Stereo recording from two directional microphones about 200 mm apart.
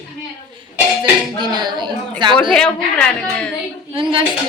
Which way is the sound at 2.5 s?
5° left (ahead or behind).